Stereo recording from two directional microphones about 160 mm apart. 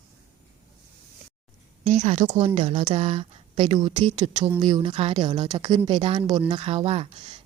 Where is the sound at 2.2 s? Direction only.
30° right (ahead or behind).